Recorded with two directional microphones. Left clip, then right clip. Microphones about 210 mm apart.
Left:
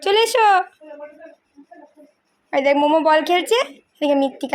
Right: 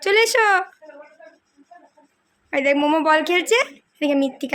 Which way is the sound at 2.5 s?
10° right (ahead or behind).